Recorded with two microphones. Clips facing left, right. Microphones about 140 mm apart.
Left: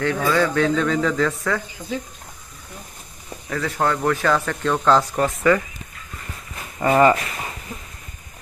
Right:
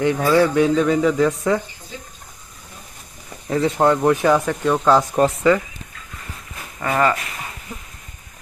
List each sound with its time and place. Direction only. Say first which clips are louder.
0.0 s speech: right 4 dB; 15° right (ahead or behind)
3.5 s speech: right 6 dB; 25° right (ahead or behind)
6.7 s speech: left 4 dB; 15° left (ahead or behind)